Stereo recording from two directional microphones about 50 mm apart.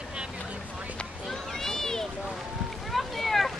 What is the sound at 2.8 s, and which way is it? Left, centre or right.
Boat, centre.